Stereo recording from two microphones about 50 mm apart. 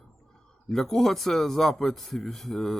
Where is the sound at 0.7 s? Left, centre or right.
Centre.